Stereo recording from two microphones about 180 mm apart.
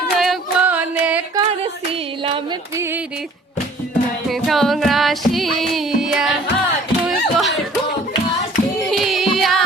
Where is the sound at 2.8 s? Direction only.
10° right (ahead or behind).